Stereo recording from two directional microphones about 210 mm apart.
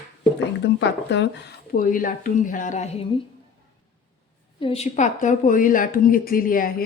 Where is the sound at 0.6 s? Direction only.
55° left (ahead or behind).